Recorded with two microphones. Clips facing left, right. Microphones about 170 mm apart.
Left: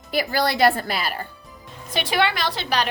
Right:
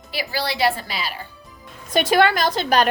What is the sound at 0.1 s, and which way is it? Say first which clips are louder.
A woman's voice: left 4 dB; 50° left (ahead or behind).